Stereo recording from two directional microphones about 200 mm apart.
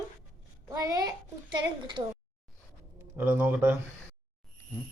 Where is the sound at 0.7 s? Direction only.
20° right (ahead or behind).